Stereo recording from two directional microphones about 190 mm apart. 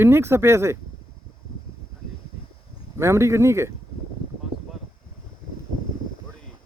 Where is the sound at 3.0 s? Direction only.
15° right (ahead or behind).